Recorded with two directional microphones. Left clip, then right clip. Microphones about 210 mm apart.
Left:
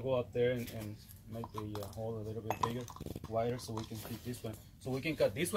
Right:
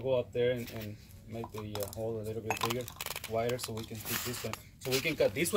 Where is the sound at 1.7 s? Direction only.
15° right (ahead or behind).